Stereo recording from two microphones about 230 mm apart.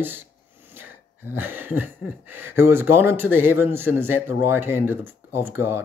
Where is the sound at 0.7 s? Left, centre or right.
Centre.